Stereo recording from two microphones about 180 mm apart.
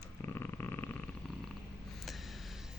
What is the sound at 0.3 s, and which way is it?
Purr, 10° left (ahead or behind).